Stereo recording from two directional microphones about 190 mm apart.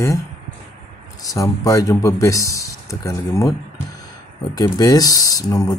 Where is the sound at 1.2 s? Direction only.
20° left (ahead or behind).